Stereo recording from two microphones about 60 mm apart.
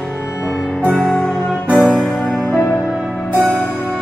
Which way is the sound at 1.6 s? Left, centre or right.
Right.